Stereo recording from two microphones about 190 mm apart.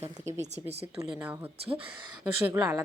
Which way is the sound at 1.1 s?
10° right (ahead or behind).